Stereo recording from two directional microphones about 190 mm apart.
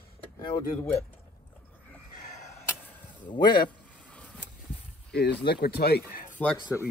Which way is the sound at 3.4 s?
50° left (ahead or behind).